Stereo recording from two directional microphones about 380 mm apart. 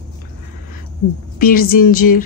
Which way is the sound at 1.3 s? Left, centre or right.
Left.